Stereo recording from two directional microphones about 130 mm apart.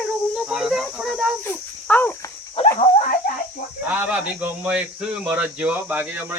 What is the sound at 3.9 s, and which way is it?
Speech, 10° right (ahead or behind).